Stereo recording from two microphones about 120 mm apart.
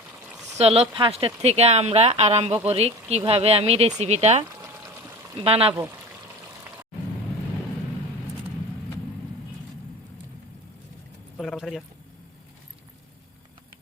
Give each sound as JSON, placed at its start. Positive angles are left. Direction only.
{"t": 0.5, "sound": "speech", "side_deg": -55}
{"t": 5.5, "sound": "speech", "side_deg": -55}
{"t": 11.3, "sound": "keys jangling", "side_deg": 0}